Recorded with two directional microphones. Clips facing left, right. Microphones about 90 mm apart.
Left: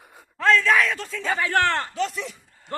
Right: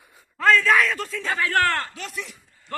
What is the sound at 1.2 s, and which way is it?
Speech, 20° left (ahead or behind).